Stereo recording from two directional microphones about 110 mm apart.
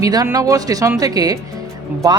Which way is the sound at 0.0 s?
35° right (ahead or behind).